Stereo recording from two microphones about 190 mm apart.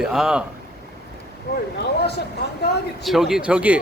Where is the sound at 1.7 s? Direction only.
60° left (ahead or behind).